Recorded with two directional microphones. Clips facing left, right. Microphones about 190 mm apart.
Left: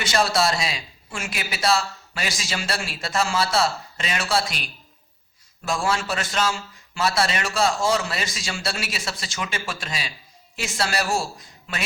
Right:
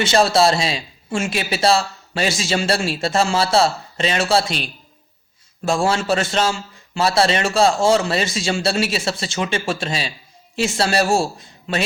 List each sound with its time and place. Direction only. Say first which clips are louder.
0.0 s a man's voice: right 6 dB; 25° right (ahead or behind)